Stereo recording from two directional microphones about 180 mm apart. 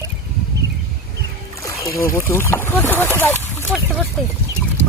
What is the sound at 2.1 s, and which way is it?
Speech, 15° left (ahead or behind).